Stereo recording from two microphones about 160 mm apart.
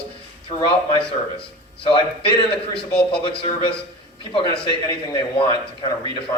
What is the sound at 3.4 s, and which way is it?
Speech, 35° left (ahead or behind).